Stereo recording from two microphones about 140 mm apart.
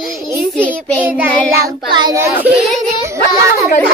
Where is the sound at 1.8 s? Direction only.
35° right (ahead or behind).